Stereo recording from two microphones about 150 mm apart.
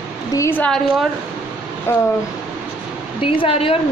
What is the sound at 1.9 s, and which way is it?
Speech, 15° left (ahead or behind).